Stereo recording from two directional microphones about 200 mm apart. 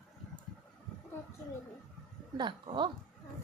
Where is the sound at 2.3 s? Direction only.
25° right (ahead or behind).